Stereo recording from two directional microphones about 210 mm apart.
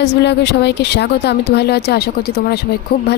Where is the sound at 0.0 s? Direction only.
55° left (ahead or behind).